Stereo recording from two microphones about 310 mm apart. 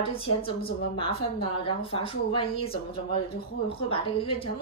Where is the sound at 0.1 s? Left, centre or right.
Left.